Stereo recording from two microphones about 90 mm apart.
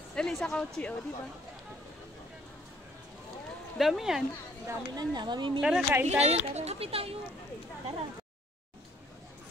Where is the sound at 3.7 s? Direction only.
Centre (ahead or behind).